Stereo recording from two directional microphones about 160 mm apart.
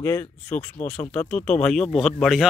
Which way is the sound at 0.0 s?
10° left (ahead or behind).